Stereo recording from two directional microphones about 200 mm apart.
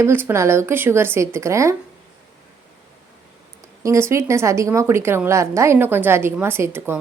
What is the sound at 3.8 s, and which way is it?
A woman's voice, 15° right (ahead or behind).